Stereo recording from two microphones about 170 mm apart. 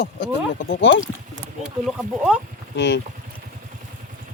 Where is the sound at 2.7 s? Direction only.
90° left.